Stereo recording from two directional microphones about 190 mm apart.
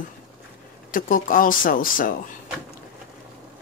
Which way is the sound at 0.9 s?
45° left (ahead or behind).